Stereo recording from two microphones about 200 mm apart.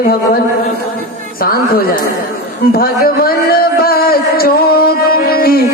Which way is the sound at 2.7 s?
50° left (ahead or behind).